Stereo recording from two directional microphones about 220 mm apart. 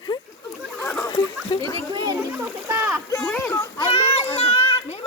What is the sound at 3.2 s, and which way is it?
Speech, 10° left (ahead or behind).